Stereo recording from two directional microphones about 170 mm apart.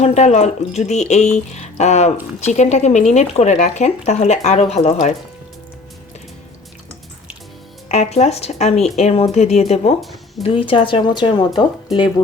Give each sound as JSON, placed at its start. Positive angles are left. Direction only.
{"t": 0.0, "sound": "speech", "side_deg": 40}
{"t": 7.9, "sound": "speech", "side_deg": 40}
{"t": 10.0, "sound": "speech", "side_deg": 0}
{"t": 10.4, "sound": "speech", "side_deg": 30}